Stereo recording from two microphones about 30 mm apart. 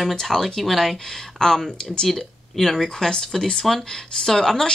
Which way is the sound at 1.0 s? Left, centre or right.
Centre.